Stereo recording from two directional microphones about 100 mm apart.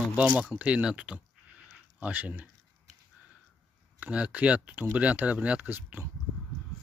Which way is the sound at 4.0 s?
15° right (ahead or behind).